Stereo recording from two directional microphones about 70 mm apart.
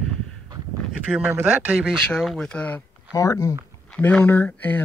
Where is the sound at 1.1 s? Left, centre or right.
Centre.